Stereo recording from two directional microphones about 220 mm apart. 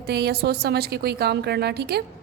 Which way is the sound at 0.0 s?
45° right (ahead or behind).